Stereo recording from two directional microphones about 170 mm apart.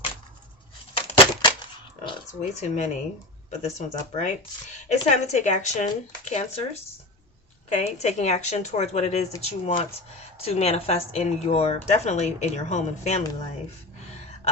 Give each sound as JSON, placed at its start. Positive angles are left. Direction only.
{"t": 0.9, "sound": "a sound", "side_deg": 25}
{"t": 2.4, "sound": "speech", "side_deg": 45}
{"t": 7.7, "sound": "speech", "side_deg": 40}